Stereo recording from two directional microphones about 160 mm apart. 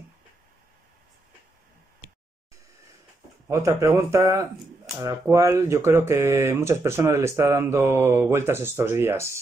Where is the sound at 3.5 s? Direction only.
20° right (ahead or behind).